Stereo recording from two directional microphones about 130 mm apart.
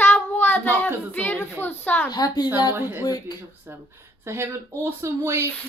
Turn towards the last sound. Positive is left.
turn(degrees=-20)  # may be behind; listen again after turning